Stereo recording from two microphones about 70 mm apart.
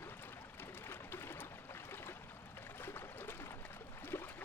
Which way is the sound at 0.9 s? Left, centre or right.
Left.